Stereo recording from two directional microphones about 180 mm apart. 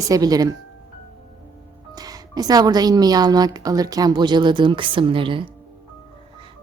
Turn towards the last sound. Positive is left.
turn(degrees=-30)  # may be behind; listen again after turning